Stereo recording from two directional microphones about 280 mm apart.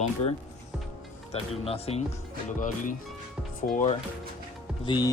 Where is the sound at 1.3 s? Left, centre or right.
Left.